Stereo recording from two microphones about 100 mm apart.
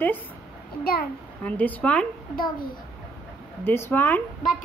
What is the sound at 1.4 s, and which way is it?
Speech, 15° left (ahead or behind).